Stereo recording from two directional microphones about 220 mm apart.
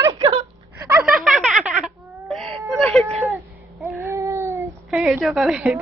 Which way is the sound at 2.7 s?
Centre (ahead or behind).